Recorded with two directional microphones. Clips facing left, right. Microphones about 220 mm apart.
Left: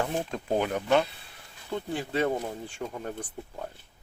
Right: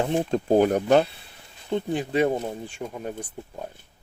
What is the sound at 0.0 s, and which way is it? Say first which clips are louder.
Speech: right 7 dB; 25° right (ahead or behind).